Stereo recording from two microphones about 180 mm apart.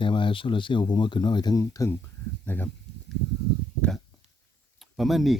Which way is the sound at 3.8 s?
5° left (ahead or behind).